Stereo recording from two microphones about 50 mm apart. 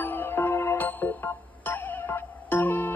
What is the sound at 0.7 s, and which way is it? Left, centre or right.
Music, left.